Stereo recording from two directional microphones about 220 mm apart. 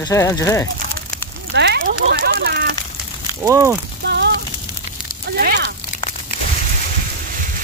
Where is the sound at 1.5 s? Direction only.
50° right (ahead or behind).